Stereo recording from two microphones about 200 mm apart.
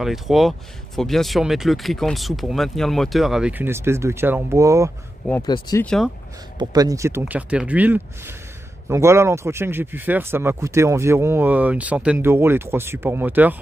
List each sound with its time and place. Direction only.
0.0 s speech: centre (ahead or behind)
5.4 s speech: 20° left (ahead or behind)
6.6 s speech: 20° right (ahead or behind)